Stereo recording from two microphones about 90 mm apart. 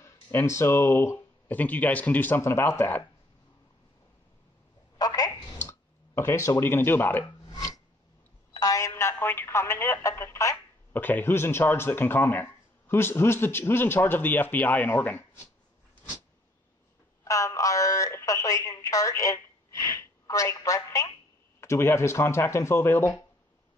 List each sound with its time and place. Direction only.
0.0 s speech: 30° left (ahead or behind)
1.5 s speech: 20° left (ahead or behind)
4.9 s telephone: 45° left (ahead or behind)
5.6 s speech: 30° left (ahead or behind)
7.5 s filing: 40° left (ahead or behind)
8.5 s telephone: 40° left (ahead or behind)
9.1 s speech: 25° left (ahead or behind)
10.9 s speech: 20° left (ahead or behind)
17.2 s a sound: 35° left (ahead or behind)
21.5 s speech: 30° left (ahead or behind)